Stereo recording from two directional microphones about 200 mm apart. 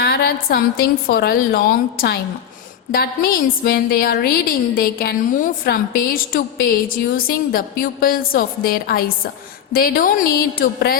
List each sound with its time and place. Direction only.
0.0 s a woman's voice: 55° left (ahead or behind)